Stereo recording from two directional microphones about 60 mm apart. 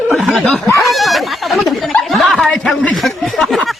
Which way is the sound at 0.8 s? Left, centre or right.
Centre.